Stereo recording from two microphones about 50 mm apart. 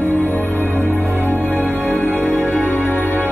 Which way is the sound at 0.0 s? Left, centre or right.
Left.